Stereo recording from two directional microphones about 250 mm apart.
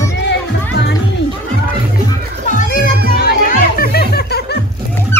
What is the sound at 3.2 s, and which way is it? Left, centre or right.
Music, left.